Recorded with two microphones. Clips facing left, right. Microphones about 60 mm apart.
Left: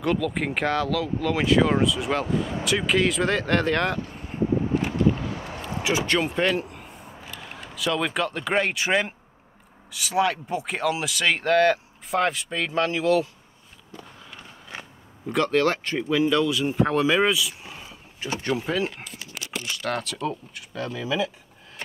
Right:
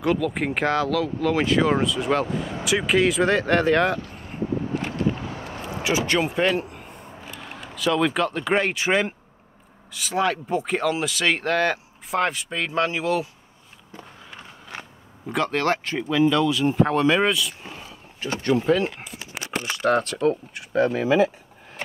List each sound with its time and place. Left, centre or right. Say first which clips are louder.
0.0 s speech: right 2 dB; centre
5.8 s a sound: right 1 dB; centre
7.3 s speech: even; centre
13.9 s walk: right 1 dB; right
15.2 s speech: left 1 dB; centre
17.8 s a sound: right 2 dB; centre
18.6 s speech: right 5 dB; centre
19.6 s speech: right 8 dB; right
20.0 s speech: right 7 dB; right